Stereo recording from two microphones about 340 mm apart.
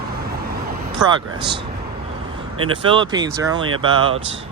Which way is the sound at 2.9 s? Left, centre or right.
Centre.